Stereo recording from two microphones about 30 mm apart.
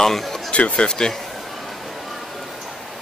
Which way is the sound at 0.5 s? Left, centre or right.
Left.